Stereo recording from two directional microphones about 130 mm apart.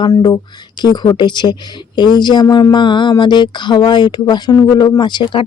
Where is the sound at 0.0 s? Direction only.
35° left (ahead or behind).